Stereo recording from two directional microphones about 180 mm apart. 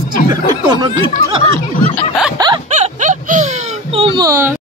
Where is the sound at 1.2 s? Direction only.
90° right.